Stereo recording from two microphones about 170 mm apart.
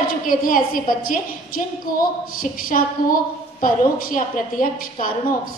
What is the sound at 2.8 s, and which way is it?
A woman's voice, 55° left (ahead or behind).